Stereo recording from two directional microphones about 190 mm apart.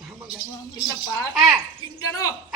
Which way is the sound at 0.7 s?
20° left (ahead or behind).